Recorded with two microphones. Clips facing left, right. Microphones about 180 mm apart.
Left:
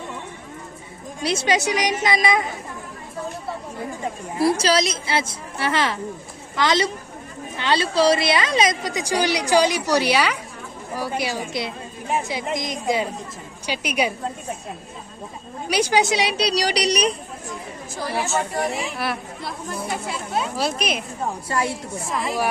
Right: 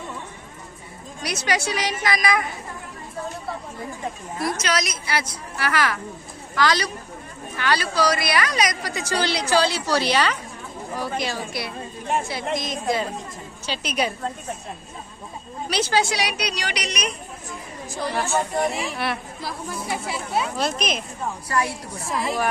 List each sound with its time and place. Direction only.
1.2 s a woman's voice: 25° left (ahead or behind)
4.4 s a woman's voice: 30° left (ahead or behind); by 14.1 s 10° left (ahead or behind)
15.7 s a woman's voice: 15° left (ahead or behind); by 17.2 s 35° left (ahead or behind)
18.1 s a woman's voice: 10° left (ahead or behind)
18.7 s speech: centre (ahead or behind)
21.5 s a woman's voice: 25° left (ahead or behind)
22.1 s speech: centre (ahead or behind)